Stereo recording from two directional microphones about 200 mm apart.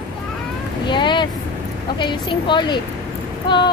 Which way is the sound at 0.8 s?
25° left (ahead or behind).